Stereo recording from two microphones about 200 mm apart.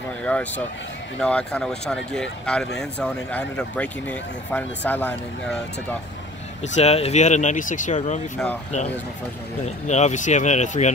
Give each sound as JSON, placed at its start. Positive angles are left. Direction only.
{"t": 0.2, "sound": "speech", "side_deg": 5}
{"t": 6.6, "sound": "speech", "side_deg": 35}
{"t": 9.8, "sound": "speech", "side_deg": 35}